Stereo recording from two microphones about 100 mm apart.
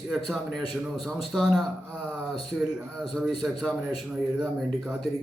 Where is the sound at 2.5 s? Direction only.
15° right (ahead or behind).